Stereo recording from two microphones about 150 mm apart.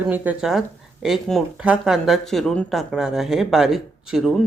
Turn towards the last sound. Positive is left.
turn(degrees=0)  # may be behind; listen again after turning